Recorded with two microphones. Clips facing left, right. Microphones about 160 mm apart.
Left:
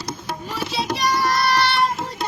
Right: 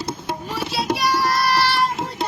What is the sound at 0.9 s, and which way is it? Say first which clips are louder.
Child singing: left 2 dB; 5° right (ahead or behind).